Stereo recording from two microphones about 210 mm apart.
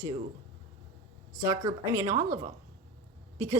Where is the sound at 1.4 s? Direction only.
15° right (ahead or behind).